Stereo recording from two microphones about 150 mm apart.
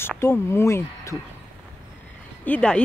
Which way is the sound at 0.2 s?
15° left (ahead or behind).